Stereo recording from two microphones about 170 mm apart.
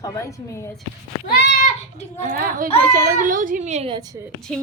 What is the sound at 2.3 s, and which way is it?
A child's voice, 55° right (ahead or behind).